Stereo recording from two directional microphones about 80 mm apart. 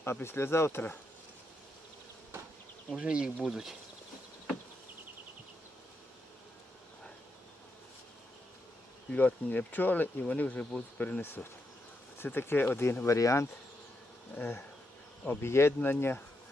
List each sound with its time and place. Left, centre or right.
0.0 s speech: left
3.0 s speech: centre
9.0 s speech: centre
11.2 s speech: left
13.1 s speech: left
14.3 s speech: left